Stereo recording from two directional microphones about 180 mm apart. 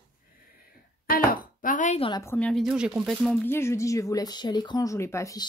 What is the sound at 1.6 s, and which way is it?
Speech, 45° left (ahead or behind).